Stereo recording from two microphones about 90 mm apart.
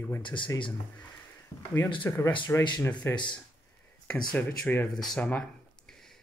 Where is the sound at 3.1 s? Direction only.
60° left (ahead or behind).